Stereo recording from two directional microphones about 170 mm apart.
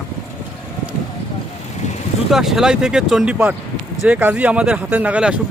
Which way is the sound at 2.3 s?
Centre (ahead or behind).